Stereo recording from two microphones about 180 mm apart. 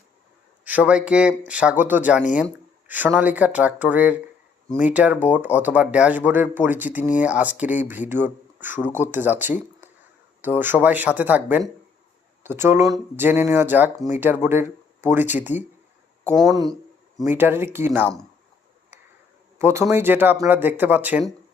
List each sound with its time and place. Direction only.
0.6 s speech: 10° right (ahead or behind)
19.5 s speech: 15° right (ahead or behind)